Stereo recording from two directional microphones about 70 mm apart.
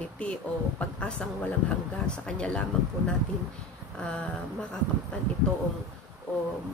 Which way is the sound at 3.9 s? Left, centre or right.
Centre.